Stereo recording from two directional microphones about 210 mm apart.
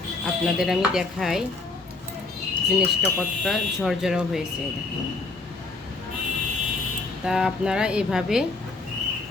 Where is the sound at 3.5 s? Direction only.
Centre (ahead or behind).